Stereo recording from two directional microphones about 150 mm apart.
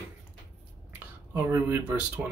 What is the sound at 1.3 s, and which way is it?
Speech, 15° right (ahead or behind).